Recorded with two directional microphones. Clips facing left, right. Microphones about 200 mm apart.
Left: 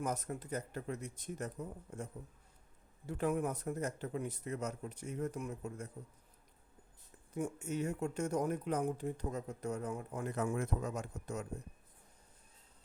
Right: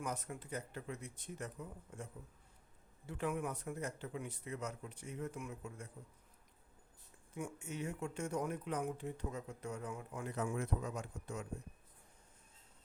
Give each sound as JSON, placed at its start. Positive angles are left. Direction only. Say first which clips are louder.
{"t": 0.0, "sound": "speech", "louder": "left 5 dB", "side_deg": 40}
{"t": 3.1, "sound": "speech", "louder": "left 5 dB", "side_deg": 40}
{"t": 7.3, "sound": "speech", "louder": "left 6 dB", "side_deg": 40}